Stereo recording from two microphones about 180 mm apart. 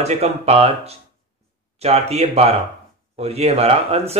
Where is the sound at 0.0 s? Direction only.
35° right (ahead or behind).